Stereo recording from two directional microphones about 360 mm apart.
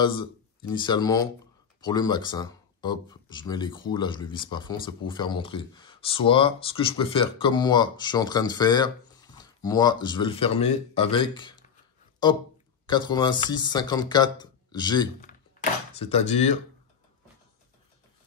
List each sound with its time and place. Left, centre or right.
0.0 s speech: centre